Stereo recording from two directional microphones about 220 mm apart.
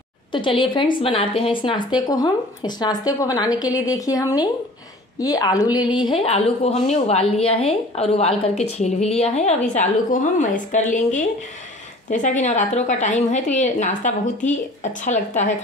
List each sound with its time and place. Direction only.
0.3 s a woman's voice: 20° left (ahead or behind)
12.1 s a woman's voice: 35° left (ahead or behind)